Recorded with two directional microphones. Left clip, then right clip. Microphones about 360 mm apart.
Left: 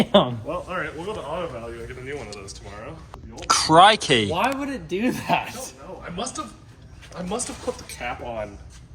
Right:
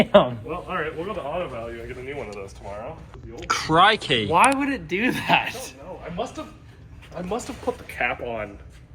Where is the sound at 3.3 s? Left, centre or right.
Centre.